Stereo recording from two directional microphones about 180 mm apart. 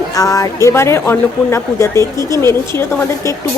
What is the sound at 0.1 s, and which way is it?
A woman's voice, 20° left (ahead or behind).